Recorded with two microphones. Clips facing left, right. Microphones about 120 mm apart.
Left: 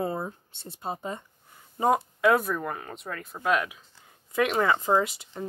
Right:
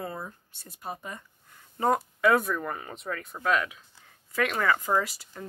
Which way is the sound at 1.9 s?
Centre (ahead or behind).